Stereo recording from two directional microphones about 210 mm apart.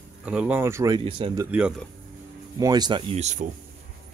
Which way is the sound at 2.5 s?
20° right (ahead or behind).